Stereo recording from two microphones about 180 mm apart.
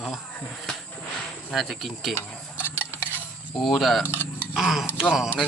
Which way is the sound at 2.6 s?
10° left (ahead or behind).